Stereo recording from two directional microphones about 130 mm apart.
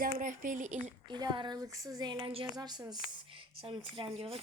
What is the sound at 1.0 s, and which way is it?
Speech, 35° right (ahead or behind).